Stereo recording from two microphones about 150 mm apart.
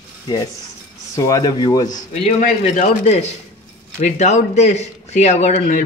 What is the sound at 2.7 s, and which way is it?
Speech, 50° left (ahead or behind).